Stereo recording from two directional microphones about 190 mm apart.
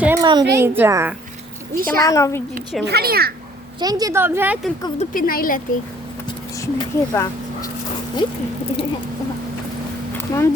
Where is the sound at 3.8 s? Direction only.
20° right (ahead or behind).